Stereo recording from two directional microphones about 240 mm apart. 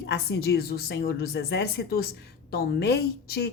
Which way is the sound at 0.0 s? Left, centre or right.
Left.